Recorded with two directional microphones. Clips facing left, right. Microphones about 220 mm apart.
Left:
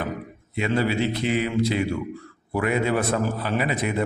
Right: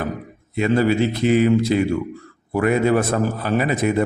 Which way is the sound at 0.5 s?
45° right (ahead or behind).